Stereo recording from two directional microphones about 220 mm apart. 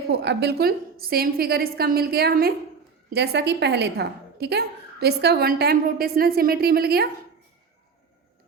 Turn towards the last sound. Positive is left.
turn(degrees=-45)  # may be behind; listen again after turning